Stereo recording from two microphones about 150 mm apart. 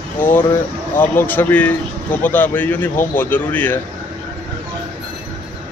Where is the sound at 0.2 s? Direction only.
15° left (ahead or behind).